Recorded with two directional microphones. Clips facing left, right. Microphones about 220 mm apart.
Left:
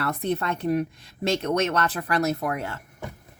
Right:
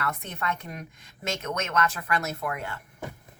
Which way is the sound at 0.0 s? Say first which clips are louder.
Left 6 dB; 35° left (ahead or behind).